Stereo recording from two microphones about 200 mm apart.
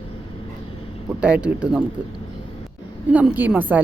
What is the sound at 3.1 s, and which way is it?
Speech, 5° right (ahead or behind).